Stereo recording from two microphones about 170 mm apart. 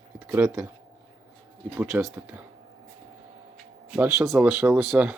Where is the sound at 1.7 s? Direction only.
15° right (ahead or behind).